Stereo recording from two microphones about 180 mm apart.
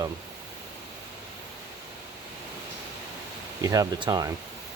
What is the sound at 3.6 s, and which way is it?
Speech, 20° right (ahead or behind).